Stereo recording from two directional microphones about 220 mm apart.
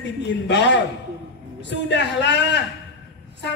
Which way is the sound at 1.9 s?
50° left (ahead or behind).